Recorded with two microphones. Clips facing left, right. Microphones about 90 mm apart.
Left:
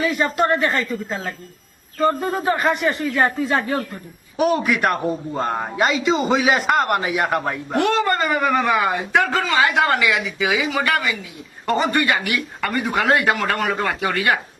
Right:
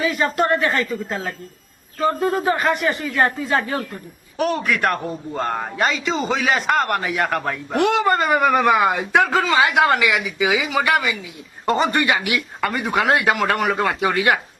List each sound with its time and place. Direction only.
0.0 s a man's voice: centre (ahead or behind)
7.8 s a man's voice: 15° right (ahead or behind)
14.0 s speech: 15° right (ahead or behind)